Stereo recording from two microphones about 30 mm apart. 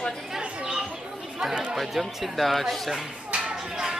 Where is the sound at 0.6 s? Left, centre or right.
Right.